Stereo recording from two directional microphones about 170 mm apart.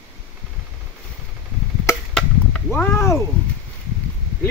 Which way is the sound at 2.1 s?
5° left (ahead or behind).